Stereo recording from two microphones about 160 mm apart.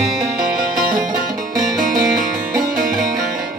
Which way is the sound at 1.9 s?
60° right (ahead or behind).